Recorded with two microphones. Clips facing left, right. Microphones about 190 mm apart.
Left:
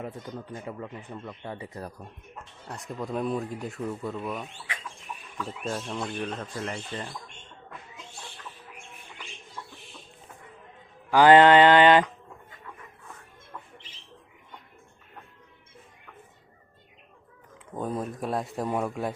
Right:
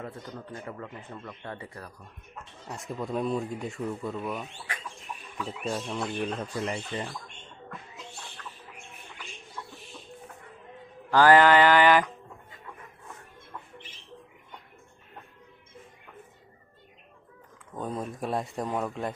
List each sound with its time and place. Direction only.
0.0 s speech: 15° left (ahead or behind)
2.6 s speech: centre (ahead or behind)
11.1 s mantra: 20° left (ahead or behind)
17.7 s speech: 5° left (ahead or behind)